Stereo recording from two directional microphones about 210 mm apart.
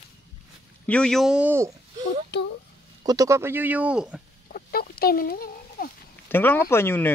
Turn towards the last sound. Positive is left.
turn(degrees=10)  # may be behind; listen again after turning